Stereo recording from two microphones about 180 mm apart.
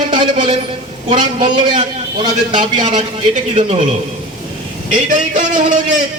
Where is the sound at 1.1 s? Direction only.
25° right (ahead or behind).